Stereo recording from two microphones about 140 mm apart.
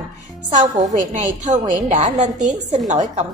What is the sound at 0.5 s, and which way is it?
A woman's voice, 60° right (ahead or behind).